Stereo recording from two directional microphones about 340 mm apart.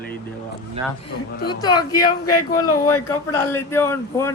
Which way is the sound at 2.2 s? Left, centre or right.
Left.